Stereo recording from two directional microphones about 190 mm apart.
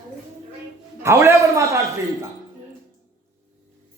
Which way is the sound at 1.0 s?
15° right (ahead or behind).